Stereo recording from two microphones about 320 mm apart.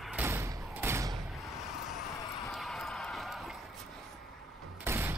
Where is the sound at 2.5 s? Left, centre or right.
Centre.